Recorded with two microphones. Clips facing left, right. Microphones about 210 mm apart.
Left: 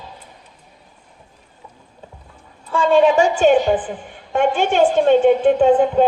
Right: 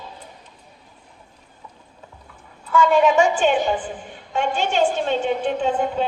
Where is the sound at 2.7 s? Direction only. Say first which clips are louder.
Left 2 dB; 30° left (ahead or behind).